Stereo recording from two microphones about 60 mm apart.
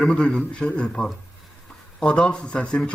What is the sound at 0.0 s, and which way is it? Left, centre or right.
Speech, centre.